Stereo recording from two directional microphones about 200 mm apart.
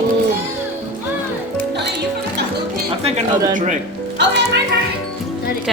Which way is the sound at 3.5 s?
40° right (ahead or behind).